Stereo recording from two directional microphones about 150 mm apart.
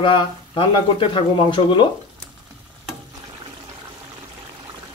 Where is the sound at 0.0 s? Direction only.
35° left (ahead or behind).